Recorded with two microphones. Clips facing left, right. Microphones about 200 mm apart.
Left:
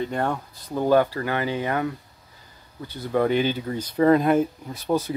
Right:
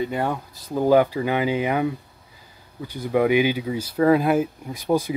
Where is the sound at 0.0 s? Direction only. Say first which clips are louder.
Right 1 dB; 5° right (ahead or behind).